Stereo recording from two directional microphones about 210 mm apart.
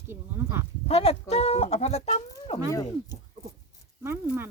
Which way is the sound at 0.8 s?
30° left (ahead or behind).